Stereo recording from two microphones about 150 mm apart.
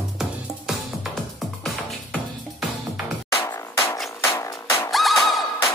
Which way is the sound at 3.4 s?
25° left (ahead or behind).